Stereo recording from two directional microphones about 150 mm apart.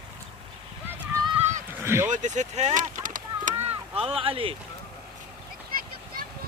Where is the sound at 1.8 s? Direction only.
15° right (ahead or behind).